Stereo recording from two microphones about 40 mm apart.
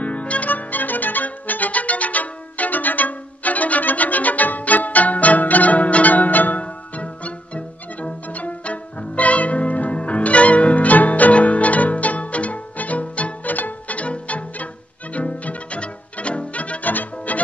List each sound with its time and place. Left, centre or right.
0.0 s music: left
6.6 s music: left
16.9 s music: left